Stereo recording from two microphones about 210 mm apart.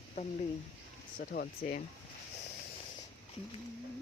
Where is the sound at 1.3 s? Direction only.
45° left (ahead or behind).